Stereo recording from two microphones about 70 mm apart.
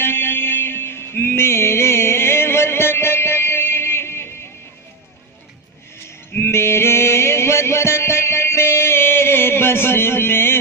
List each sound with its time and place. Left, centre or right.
0.0 s music: left
6.3 s music: left